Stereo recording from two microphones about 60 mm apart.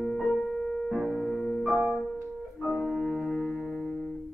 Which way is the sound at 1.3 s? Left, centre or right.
Centre.